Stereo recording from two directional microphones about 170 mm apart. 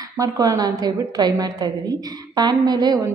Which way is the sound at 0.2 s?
20° right (ahead or behind).